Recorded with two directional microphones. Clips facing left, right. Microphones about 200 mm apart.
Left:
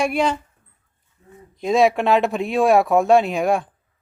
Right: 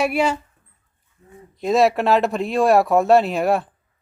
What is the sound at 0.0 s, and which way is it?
Speech, 5° right (ahead or behind).